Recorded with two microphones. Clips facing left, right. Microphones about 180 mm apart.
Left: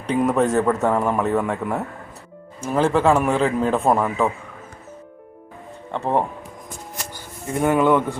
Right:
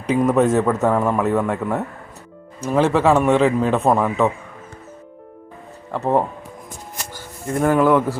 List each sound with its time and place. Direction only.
0.2 s a man's voice: centre (ahead or behind)
5.9 s a man's voice: centre (ahead or behind)
7.5 s a man's voice: centre (ahead or behind)